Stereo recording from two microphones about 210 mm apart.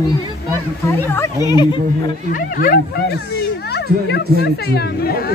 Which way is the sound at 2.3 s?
40° left (ahead or behind).